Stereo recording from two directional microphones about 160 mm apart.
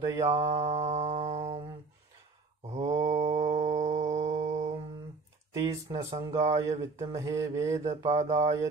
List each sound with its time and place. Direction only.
0.0 s mantra: 20° right (ahead or behind)
0.4 s music: 45° right (ahead or behind)
2.7 s mantra: 45° right (ahead or behind)
5.5 s mantra: 20° right (ahead or behind)
8.1 s a sound: 45° right (ahead or behind)